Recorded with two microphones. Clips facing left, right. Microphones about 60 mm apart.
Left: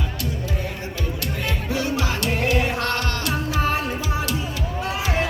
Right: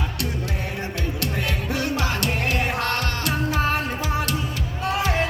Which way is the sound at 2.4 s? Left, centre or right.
Centre.